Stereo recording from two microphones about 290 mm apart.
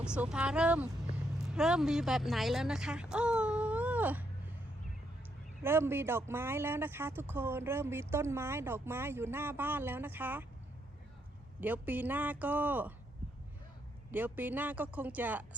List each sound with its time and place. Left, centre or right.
0.0 s speech: centre
5.6 s speech: centre
11.6 s speech: centre
14.1 s speech: centre